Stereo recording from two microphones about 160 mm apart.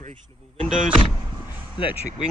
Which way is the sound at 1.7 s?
30° left (ahead or behind).